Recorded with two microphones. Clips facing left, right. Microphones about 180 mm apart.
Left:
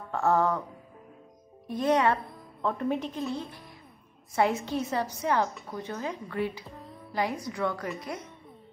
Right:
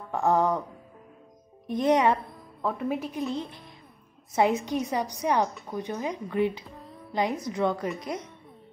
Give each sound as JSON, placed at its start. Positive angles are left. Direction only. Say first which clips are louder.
{"t": 0.1, "sound": "speech", "louder": "right 1 dB", "side_deg": -15}
{"t": 1.7, "sound": "speech", "louder": "right 2 dB", "side_deg": -20}
{"t": 2.2, "sound": "speech", "louder": "even", "side_deg": 0}
{"t": 6.8, "sound": "music", "louder": "even", "side_deg": 0}
{"t": 7.1, "sound": "speech", "louder": "right 3 dB", "side_deg": -20}